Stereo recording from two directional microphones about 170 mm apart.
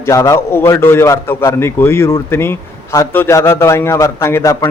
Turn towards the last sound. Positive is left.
turn(degrees=20)  # may be behind; listen again after turning